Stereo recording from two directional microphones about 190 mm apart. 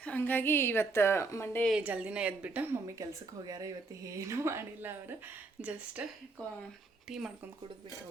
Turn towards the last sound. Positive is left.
turn(degrees=-5)  # may be behind; listen again after turning